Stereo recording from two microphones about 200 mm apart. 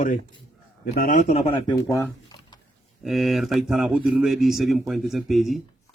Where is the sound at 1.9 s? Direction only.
20° left (ahead or behind).